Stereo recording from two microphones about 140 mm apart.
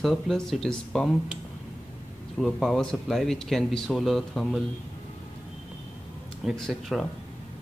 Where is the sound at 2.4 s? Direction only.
Centre (ahead or behind).